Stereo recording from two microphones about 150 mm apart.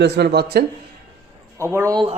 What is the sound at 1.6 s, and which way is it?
Speech, 20° right (ahead or behind).